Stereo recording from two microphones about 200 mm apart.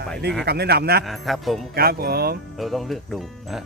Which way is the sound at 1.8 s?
50° right (ahead or behind).